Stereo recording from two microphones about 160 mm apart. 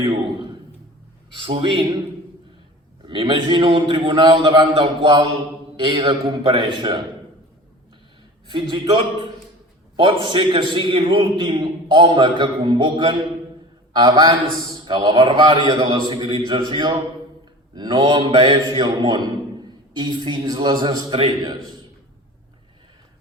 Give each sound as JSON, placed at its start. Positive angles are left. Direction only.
{"t": 0.0, "sound": "a man's voice", "side_deg": -30}
{"t": 3.0, "sound": "a man's voice", "side_deg": -30}
{"t": 8.4, "sound": "a man's voice", "side_deg": -30}